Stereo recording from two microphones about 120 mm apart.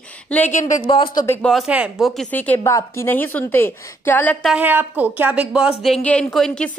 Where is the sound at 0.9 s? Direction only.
45° left (ahead or behind).